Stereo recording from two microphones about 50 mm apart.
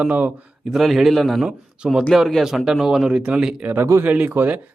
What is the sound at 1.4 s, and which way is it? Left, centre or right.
Speech, centre.